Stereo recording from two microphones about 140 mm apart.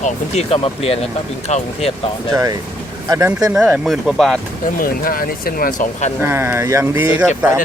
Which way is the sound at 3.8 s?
Centre (ahead or behind).